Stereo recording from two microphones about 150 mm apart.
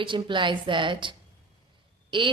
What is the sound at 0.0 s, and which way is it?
Speech, 35° right (ahead or behind).